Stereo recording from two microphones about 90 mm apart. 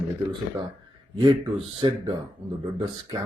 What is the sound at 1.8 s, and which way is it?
Speech, 55° right (ahead or behind).